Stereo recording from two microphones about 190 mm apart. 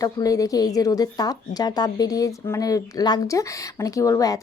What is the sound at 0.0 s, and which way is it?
Speech, 20° left (ahead or behind).